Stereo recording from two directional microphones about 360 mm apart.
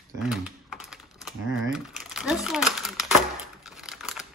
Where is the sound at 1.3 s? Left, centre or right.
Centre.